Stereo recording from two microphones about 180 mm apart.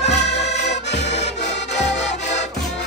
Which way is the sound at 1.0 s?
40° left (ahead or behind).